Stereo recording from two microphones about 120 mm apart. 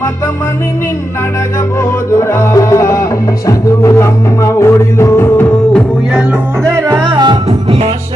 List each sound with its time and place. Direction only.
1.8 s music: 25° left (ahead or behind)
6.7 s music: 25° right (ahead or behind)
7.0 s music: 40° right (ahead or behind)
7.4 s music: 55° right (ahead or behind)